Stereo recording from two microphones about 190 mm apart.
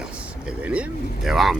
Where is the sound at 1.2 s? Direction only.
Centre (ahead or behind).